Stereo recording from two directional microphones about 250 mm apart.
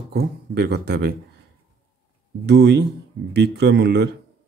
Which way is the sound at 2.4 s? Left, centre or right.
Right.